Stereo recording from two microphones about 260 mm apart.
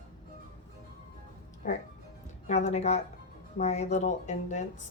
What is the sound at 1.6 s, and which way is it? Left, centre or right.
Speech, left.